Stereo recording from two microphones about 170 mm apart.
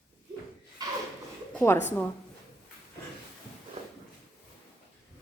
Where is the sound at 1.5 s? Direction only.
15° left (ahead or behind).